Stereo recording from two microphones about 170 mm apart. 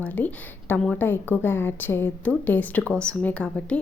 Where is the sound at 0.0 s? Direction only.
10° left (ahead or behind).